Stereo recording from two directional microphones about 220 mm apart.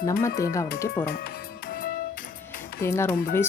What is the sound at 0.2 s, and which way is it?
Speech, 15° left (ahead or behind).